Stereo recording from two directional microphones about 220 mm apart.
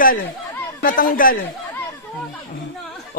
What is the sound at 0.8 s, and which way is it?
Speech, 40° left (ahead or behind).